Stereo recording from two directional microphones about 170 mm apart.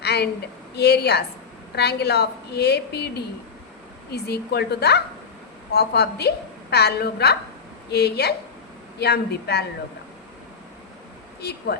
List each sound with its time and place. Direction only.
0.0 s a sound: 75° left (ahead or behind)
0.8 s a woman's voice: 75° left (ahead or behind)
11.3 s speech: 70° left (ahead or behind)